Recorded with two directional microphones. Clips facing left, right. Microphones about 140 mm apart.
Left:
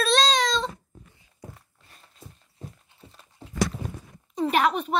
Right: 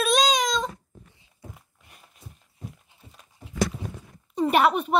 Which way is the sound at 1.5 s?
10° right (ahead or behind).